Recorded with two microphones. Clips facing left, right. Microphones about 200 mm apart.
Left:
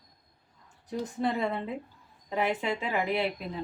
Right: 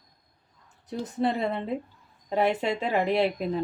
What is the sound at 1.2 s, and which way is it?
Speech, 25° right (ahead or behind).